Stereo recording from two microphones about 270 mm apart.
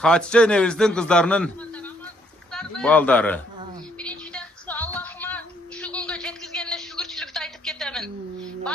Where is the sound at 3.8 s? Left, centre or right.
Centre.